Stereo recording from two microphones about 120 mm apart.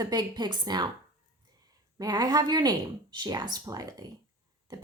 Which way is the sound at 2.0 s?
35° right (ahead or behind).